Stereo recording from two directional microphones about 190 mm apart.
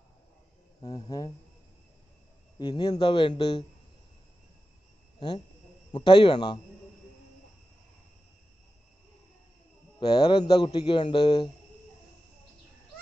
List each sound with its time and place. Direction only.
0.8 s a man's voice: 20° left (ahead or behind)
2.6 s a man's voice: 25° left (ahead or behind)
5.9 s a man's voice: 25° left (ahead or behind)
9.9 s a man's voice: 25° left (ahead or behind)